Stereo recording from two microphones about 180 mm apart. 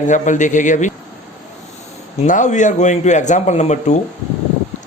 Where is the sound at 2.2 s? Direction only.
45° left (ahead or behind).